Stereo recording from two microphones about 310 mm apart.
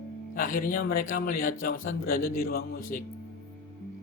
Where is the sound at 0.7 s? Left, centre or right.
Left.